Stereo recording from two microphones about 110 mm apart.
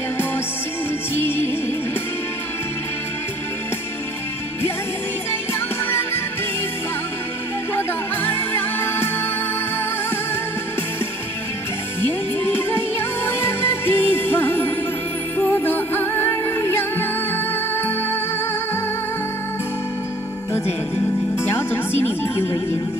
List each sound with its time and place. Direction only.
5.5 s music: 20° left (ahead or behind)
7.7 s music: 20° left (ahead or behind)
12.1 s music: 20° left (ahead or behind)
21.4 s music: 20° left (ahead or behind)